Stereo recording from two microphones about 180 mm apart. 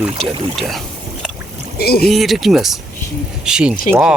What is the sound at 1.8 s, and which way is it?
Speech, 60° left (ahead or behind).